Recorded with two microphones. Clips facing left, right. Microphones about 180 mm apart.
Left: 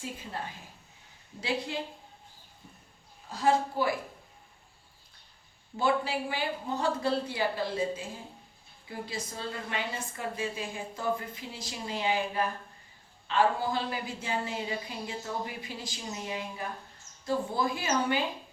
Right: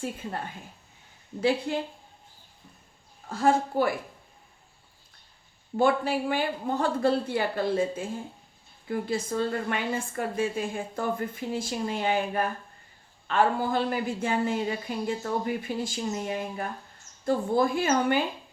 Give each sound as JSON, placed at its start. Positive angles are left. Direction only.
{"t": 0.0, "sound": "a woman's voice", "side_deg": -55}
{"t": 3.2, "sound": "a woman's voice", "side_deg": -50}
{"t": 5.7, "sound": "a woman's voice", "side_deg": -55}